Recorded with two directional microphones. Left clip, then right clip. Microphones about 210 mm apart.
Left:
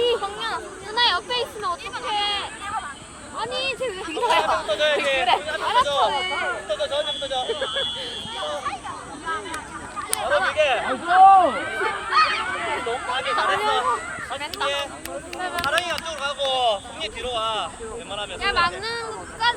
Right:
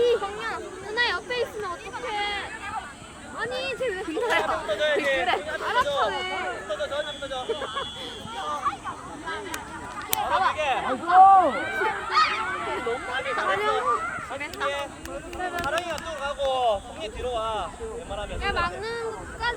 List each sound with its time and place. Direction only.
0.0 s a sound: 40° right (ahead or behind)
3.3 s speech: 50° right (ahead or behind)
10.1 s speech: 55° right (ahead or behind)
11.2 s speech: 15° left (ahead or behind)
12.4 s speech: 50° right (ahead or behind)